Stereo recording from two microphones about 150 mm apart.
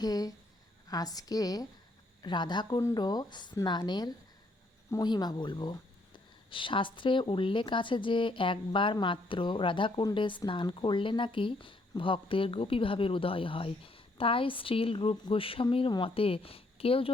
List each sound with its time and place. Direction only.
0.0 s a woman's voice: 25° left (ahead or behind)